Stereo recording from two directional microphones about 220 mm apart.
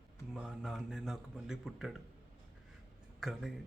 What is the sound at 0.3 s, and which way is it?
A man's voice, centre (ahead or behind).